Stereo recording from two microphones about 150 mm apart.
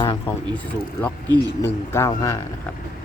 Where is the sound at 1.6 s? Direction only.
20° left (ahead or behind).